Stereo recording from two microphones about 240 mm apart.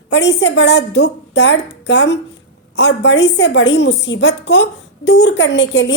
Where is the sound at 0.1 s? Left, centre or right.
Left.